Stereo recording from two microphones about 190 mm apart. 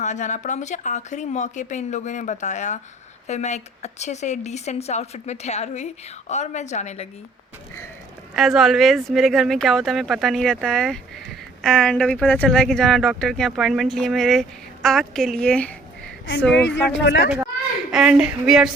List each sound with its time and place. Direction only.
0.0 s speech: 40° left (ahead or behind)
8.4 s speech: centre (ahead or behind)
16.6 s speech: 70° left (ahead or behind)
17.9 s speech: 5° right (ahead or behind)